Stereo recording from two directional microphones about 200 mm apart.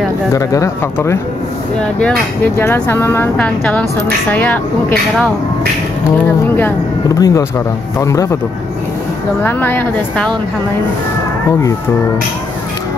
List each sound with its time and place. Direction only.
0.3 s speech: 15° left (ahead or behind)
7.2 s speech: 15° left (ahead or behind)
9.4 s speech: 10° left (ahead or behind)